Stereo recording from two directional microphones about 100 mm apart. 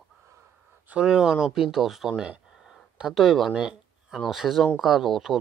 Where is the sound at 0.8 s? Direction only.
10° right (ahead or behind).